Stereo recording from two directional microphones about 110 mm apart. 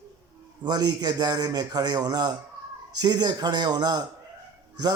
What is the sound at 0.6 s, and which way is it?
A man's voice, 40° right (ahead or behind).